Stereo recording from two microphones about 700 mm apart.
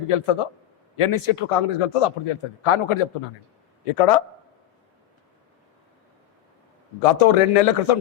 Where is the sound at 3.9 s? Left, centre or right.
Left.